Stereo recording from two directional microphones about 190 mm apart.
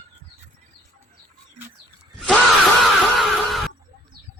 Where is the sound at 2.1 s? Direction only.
5° left (ahead or behind).